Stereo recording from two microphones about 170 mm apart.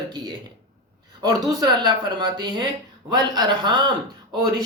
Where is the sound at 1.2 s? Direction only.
20° right (ahead or behind).